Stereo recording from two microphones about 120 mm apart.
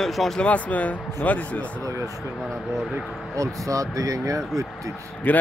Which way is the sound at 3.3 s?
25° right (ahead or behind).